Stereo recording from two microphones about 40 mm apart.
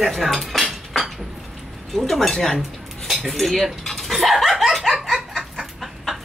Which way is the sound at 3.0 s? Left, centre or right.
Centre.